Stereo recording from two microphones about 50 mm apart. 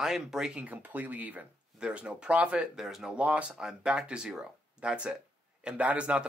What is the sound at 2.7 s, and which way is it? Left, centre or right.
Speech, centre.